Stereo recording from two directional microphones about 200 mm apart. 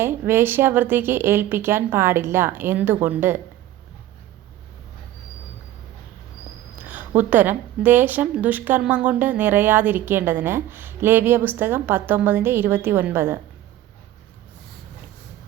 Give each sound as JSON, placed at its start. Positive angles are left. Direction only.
{"t": 0.0, "sound": "a woman's voice", "side_deg": -10}
{"t": 6.7, "sound": "a woman's voice", "side_deg": -10}